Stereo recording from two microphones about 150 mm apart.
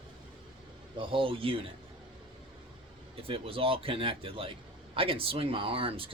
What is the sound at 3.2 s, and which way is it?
Speech, 40° right (ahead or behind).